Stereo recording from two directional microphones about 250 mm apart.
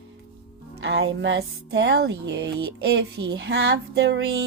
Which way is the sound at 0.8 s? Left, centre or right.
Right.